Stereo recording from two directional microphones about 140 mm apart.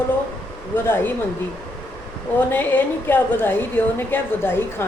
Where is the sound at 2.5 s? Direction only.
15° left (ahead or behind).